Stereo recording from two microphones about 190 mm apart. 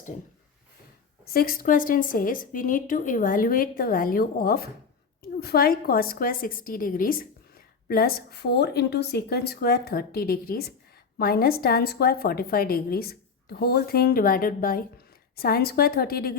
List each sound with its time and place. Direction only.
1.2 s a woman's voice: 50° left (ahead or behind)